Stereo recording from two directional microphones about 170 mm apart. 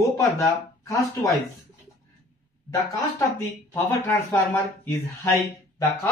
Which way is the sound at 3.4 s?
15° left (ahead or behind).